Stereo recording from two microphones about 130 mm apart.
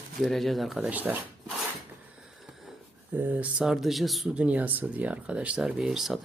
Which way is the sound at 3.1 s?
15° right (ahead or behind).